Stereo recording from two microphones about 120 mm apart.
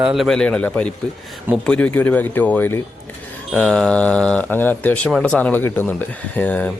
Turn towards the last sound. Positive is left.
turn(degrees=10)  # may be behind; listen again after turning